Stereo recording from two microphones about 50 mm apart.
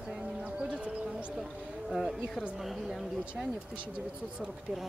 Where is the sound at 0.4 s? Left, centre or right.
Right.